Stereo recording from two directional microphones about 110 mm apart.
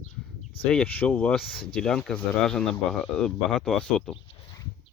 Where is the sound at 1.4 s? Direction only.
Centre (ahead or behind).